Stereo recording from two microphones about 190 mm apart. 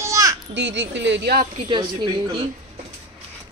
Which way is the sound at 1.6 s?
25° right (ahead or behind).